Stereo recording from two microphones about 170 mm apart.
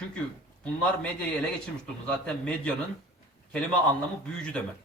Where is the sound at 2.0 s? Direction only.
5° left (ahead or behind).